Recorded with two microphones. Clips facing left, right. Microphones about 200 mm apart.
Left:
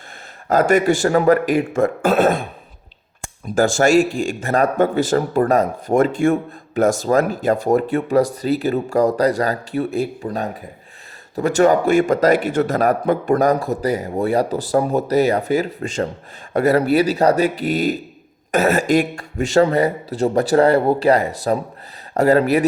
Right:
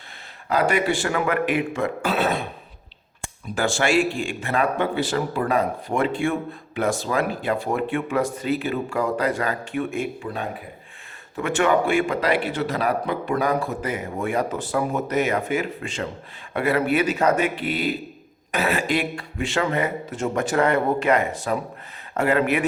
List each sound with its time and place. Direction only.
0.4 s a man's voice: 45° left (ahead or behind)